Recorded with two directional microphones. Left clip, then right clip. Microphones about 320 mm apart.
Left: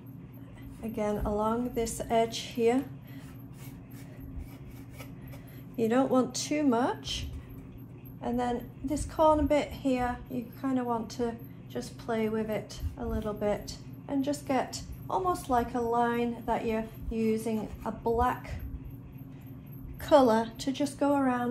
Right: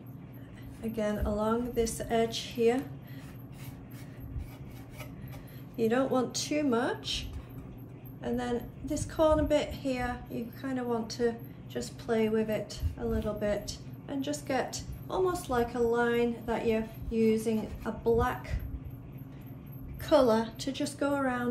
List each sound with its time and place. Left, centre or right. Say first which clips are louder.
0.9 s a woman's voice: left 1 dB; centre
5.8 s a woman's voice: left 2 dB; centre
20.0 s a woman's voice: left 2 dB; centre